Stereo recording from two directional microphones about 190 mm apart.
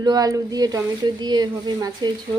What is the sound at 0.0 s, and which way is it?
Speech, 20° right (ahead or behind).